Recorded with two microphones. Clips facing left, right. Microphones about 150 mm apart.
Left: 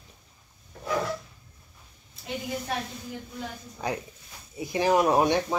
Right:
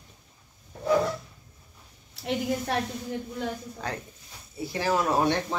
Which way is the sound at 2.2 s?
85° right.